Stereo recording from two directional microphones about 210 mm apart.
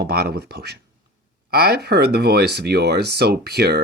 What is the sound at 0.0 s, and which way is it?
Speech, 50° right (ahead or behind).